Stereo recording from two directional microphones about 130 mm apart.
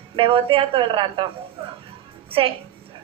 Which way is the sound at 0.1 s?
45° right (ahead or behind).